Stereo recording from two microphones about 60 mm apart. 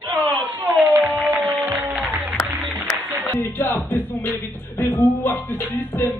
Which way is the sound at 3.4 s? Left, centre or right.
Left.